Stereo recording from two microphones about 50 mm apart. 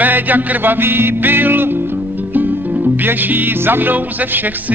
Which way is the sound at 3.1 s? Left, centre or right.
Right.